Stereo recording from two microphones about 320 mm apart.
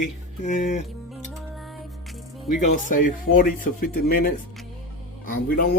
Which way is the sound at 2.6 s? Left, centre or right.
Left.